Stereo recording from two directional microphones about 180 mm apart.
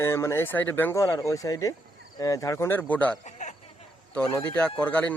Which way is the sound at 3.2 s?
40° left (ahead or behind).